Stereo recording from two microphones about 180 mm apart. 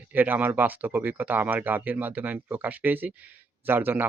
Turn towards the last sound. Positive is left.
turn(degrees=-10)  # may be behind; listen again after turning